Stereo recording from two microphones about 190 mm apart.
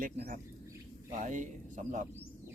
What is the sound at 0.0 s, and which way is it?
Speech, 45° right (ahead or behind).